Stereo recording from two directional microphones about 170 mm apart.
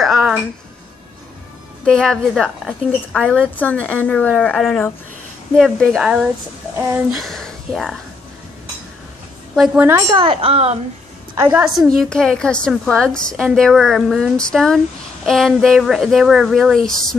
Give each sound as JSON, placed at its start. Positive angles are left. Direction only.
{"t": 0.0, "sound": "a sound", "side_deg": 0}
{"t": 1.9, "sound": "a woman's voice", "side_deg": 5}
{"t": 9.6, "sound": "a woman's voice", "side_deg": -10}
{"t": 10.1, "sound": "speech", "side_deg": -35}
{"t": 11.4, "sound": "a woman's voice", "side_deg": -5}
{"t": 12.0, "sound": "a woman's voice", "side_deg": 5}